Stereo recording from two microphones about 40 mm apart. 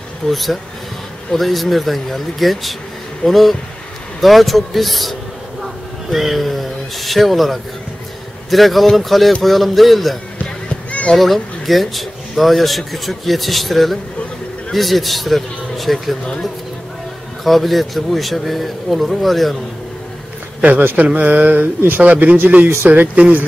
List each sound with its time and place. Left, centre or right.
0.3 s speech: centre
6.1 s speech: centre
10.7 s a sound: left
11.1 s speech: centre
17.5 s speech: centre
20.6 s speech: right